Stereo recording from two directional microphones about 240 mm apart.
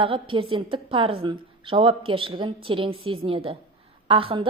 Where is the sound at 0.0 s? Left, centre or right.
Right.